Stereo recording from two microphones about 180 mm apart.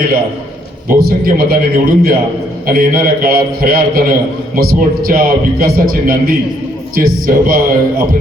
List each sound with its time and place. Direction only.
0.9 s a man's voice: 55° right (ahead or behind)